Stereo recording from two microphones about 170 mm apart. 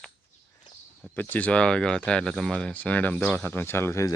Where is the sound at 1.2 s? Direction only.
10° left (ahead or behind).